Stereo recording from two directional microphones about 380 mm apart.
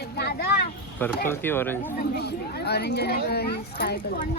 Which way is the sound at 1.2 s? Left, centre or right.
Centre.